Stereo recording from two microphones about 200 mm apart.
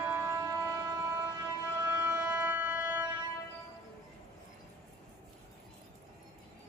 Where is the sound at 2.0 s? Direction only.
10° right (ahead or behind).